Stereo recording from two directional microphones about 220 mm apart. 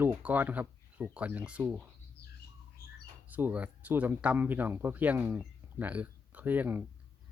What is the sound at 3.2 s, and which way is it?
Speech, 10° right (ahead or behind).